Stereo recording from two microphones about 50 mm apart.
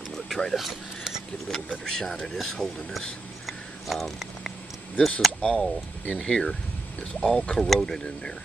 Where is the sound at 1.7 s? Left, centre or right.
Centre.